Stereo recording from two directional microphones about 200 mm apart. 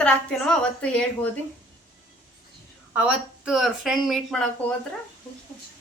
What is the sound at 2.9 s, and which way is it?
A woman's voice, 5° right (ahead or behind).